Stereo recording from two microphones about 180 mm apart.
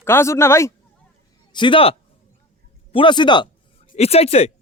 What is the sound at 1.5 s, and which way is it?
Speech, 25° left (ahead or behind).